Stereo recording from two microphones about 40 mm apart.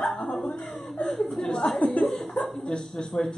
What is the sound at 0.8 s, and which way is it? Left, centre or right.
Speech, centre.